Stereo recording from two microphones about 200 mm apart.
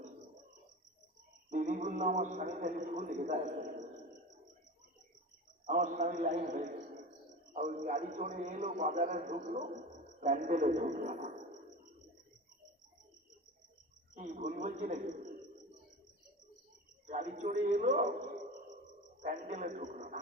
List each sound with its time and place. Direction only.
1.5 s a man's voice: 40° right (ahead or behind)
5.6 s a man's voice: 40° right (ahead or behind)
14.2 s a man's voice: 40° right (ahead or behind)
17.1 s a man's voice: 35° right (ahead or behind)
19.2 s a man's voice: 40° right (ahead or behind)